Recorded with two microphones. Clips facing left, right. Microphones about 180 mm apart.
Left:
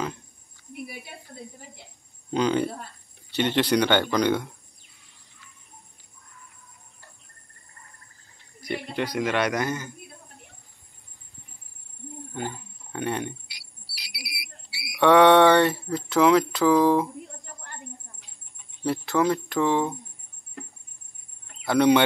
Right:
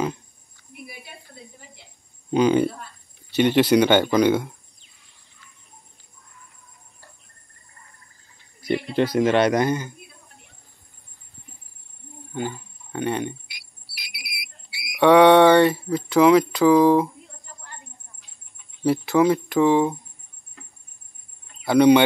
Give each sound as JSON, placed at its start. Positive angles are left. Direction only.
{"t": 2.3, "sound": "speech", "side_deg": -10}
{"t": 8.6, "sound": "a man's voice", "side_deg": -30}
{"t": 12.4, "sound": "speech", "side_deg": 0}
{"t": 13.8, "sound": "a sound", "side_deg": 35}
{"t": 14.9, "sound": "speech", "side_deg": -5}
{"t": 18.9, "sound": "speech", "side_deg": -10}
{"t": 21.6, "sound": "speech", "side_deg": 0}